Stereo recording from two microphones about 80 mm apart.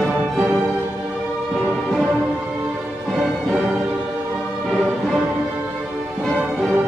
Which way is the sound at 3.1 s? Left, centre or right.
Centre.